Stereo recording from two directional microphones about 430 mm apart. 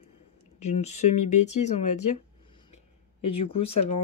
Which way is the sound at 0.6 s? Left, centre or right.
Centre.